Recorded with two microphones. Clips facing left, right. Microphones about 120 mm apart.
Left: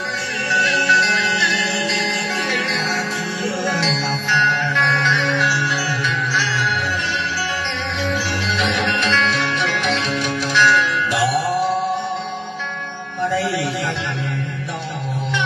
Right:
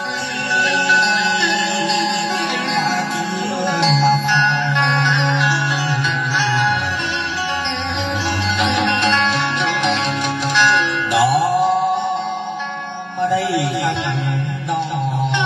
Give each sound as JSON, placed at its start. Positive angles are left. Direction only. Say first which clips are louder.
{"t": 0.8, "sound": "music", "louder": "right 2 dB", "side_deg": -20}
{"t": 3.6, "sound": "music", "louder": "right 9 dB", "side_deg": -20}
{"t": 8.5, "sound": "music", "louder": "right 3 dB", "side_deg": -20}
{"t": 10.6, "sound": "music", "louder": "left 1 dB", "side_deg": -20}